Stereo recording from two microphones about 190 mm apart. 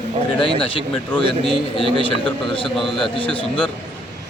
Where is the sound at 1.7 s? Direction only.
25° left (ahead or behind).